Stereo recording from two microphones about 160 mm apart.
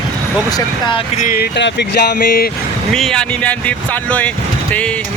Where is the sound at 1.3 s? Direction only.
90° left; by 2.5 s 65° left (ahead or behind).